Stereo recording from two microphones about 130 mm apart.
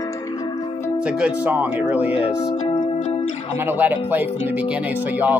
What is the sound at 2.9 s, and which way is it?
Music, 60° left (ahead or behind).